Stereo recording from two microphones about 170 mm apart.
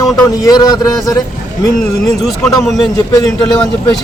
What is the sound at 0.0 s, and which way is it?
A man's voice, 20° left (ahead or behind).